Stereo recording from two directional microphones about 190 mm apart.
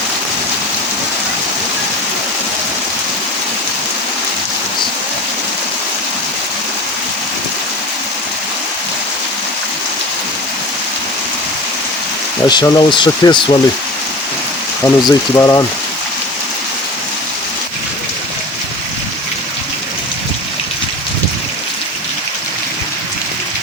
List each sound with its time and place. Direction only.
12.5 s speech: 20° left (ahead or behind)
14.8 s speech: 15° left (ahead or behind)